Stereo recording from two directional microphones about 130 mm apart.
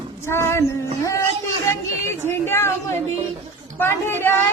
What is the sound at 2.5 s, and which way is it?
Speech, 20° left (ahead or behind).